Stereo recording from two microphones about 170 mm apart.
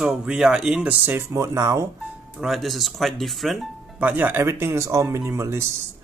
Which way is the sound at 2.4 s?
Centre (ahead or behind).